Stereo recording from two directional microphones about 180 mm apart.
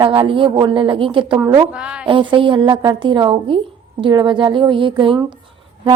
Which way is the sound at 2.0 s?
30° right (ahead or behind).